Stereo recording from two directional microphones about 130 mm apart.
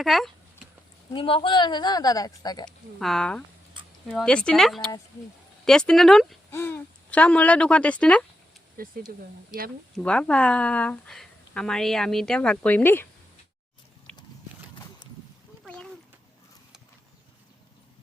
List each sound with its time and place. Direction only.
0.0 s speech: centre (ahead or behind)
1.1 s speech: 40° left (ahead or behind)
2.6 s speech: 5° left (ahead or behind)
6.5 s a woman's voice: 20° left (ahead or behind)
8.8 s speech: 90° right
10.0 s a woman's voice: 10° left (ahead or behind)
14.1 s horse: 5° left (ahead or behind)
15.6 s a sound: 5° left (ahead or behind)